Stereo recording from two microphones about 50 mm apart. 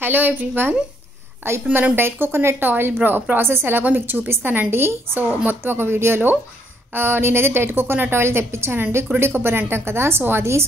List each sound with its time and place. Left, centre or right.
0.0 s a woman's voice: right
3.9 s a woman's voice: right